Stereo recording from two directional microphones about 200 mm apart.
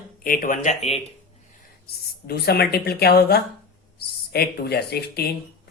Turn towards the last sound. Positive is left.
turn(degrees=50)  # may be behind; listen again after turning